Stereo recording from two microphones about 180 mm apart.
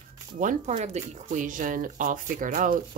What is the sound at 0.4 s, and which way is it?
Speech, 45° right (ahead or behind).